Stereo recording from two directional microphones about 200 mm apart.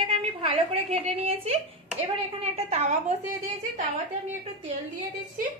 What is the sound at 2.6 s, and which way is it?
Speech, 35° right (ahead or behind).